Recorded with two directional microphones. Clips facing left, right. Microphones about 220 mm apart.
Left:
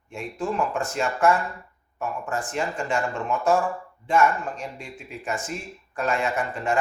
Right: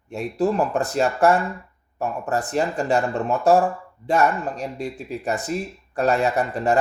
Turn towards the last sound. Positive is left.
turn(degrees=-35)  # may be behind; listen again after turning